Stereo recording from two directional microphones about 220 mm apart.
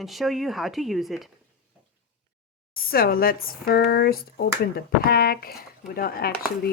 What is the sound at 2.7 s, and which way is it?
Speech, 40° left (ahead or behind).